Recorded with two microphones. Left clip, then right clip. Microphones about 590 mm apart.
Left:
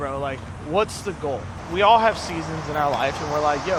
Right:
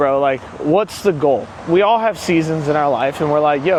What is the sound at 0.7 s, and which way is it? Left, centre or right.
Speech, right.